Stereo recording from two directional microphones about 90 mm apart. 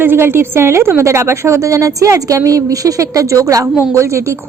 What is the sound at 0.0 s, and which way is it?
A woman's voice, 25° right (ahead or behind).